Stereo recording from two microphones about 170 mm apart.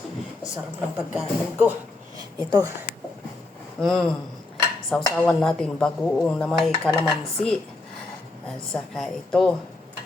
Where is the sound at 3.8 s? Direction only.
Centre (ahead or behind).